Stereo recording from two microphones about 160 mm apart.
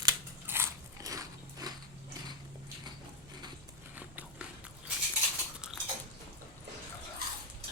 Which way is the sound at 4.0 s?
10° right (ahead or behind).